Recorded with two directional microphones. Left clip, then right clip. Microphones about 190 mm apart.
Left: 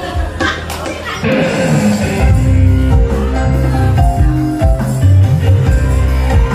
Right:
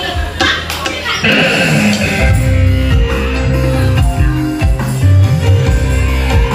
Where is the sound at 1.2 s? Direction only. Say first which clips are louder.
Right 3 dB; 55° left (ahead or behind).